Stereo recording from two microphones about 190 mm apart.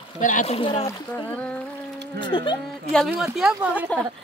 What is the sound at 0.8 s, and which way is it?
Speech, 10° left (ahead or behind).